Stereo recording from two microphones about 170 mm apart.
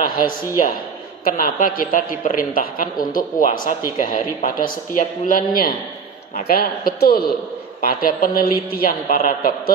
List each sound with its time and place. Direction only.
0.0 s a man's voice: 55° left (ahead or behind)